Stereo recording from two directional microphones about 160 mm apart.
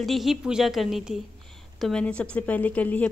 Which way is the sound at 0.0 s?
Centre (ahead or behind).